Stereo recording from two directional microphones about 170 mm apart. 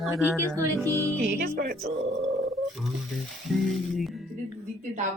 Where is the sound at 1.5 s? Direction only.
65° right (ahead or behind).